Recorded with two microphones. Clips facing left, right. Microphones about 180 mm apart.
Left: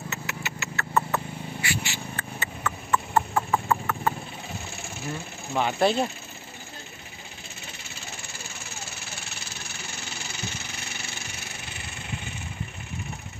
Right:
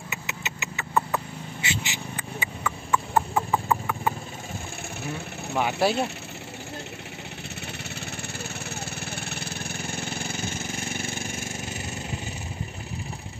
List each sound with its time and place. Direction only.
0.1 s a sound: 20° right (ahead or behind)
5.5 s speech: 5° right (ahead or behind)
8.6 s vehicle: 60° right (ahead or behind); by 12.2 s 40° right (ahead or behind)